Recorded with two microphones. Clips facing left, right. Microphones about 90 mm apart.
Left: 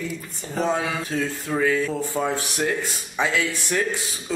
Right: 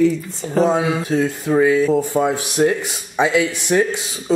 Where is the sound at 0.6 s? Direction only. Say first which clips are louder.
Right 6 dB; 20° right (ahead or behind).